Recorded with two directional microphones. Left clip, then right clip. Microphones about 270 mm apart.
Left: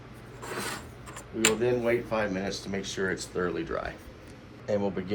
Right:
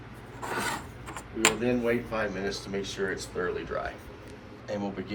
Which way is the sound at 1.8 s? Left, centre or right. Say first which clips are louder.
Left 1 dB; left.